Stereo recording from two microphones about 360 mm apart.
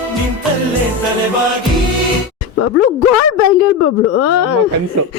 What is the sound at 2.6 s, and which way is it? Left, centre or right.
Speech, left.